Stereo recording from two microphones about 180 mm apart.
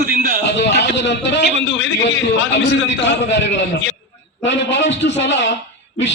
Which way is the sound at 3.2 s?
80° left.